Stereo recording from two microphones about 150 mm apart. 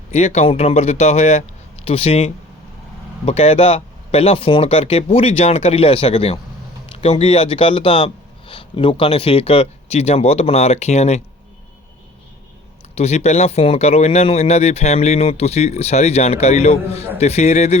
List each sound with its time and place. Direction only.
0.1 s speech: 45° left (ahead or behind)
13.0 s speech: 45° left (ahead or behind)